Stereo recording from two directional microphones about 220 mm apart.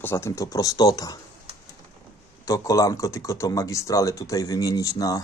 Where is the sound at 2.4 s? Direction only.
15° left (ahead or behind).